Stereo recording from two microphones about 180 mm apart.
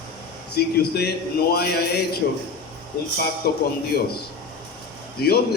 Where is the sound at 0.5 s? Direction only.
60° left (ahead or behind).